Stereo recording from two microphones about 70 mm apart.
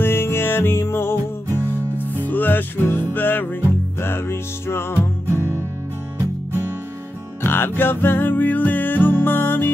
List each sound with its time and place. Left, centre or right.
0.0 s music: left
5.3 s music: right
7.4 s music: left